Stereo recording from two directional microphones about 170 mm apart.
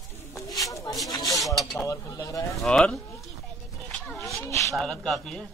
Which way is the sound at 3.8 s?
5° left (ahead or behind).